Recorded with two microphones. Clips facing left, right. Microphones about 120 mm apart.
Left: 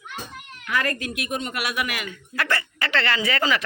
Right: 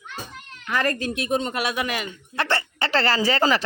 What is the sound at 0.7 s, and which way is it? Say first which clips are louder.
Speech: right 2 dB; 30° right (ahead or behind).